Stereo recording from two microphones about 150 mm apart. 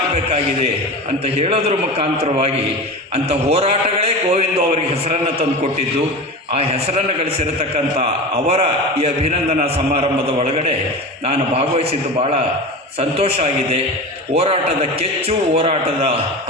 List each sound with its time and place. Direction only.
0.1 s a sound: 45° right (ahead or behind)
1.2 s a man's voice: 40° right (ahead or behind)
6.5 s a man's voice: 45° right (ahead or behind)